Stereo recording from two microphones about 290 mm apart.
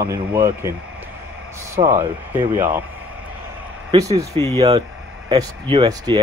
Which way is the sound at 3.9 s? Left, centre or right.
Centre.